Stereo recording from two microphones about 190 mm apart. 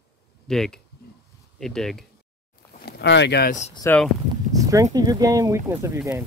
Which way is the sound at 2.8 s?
65° left (ahead or behind).